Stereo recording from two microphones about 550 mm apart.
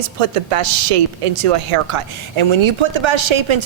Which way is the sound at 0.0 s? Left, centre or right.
Right.